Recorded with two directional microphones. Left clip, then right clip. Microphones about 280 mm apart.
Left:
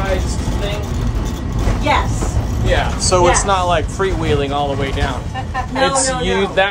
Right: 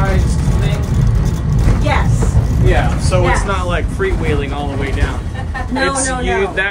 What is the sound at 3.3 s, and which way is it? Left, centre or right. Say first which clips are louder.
Speech: left 4 dB; centre.